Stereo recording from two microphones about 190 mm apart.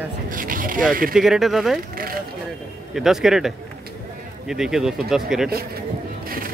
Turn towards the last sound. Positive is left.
turn(degrees=-50)  # may be behind; listen again after turning